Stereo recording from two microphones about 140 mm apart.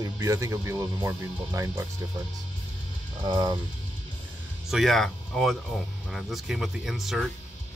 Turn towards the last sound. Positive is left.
turn(degrees=0)  # may be behind; listen again after turning